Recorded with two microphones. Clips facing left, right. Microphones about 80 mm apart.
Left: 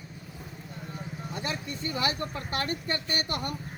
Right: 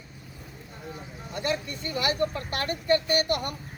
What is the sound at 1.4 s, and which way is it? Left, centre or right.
Speech, left.